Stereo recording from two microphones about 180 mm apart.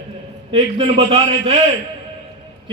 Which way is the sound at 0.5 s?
30° right (ahead or behind).